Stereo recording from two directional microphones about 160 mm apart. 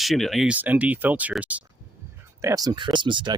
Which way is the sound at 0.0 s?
Centre (ahead or behind).